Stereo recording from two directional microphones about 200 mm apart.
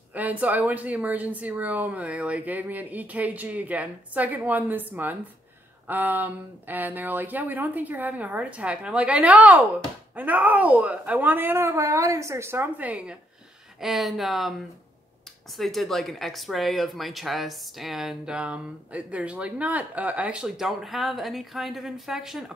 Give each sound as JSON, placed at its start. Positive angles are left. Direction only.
{"t": 0.1, "sound": "speech", "side_deg": -10}
{"t": 15.5, "sound": "speech", "side_deg": 0}